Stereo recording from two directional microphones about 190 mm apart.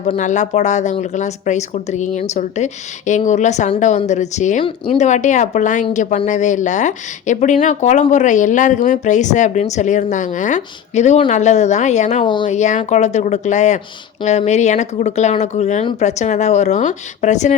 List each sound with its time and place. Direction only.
0.0 s speech: 40° left (ahead or behind)
12.2 s speech: 25° left (ahead or behind)
12.5 s speech: 40° left (ahead or behind)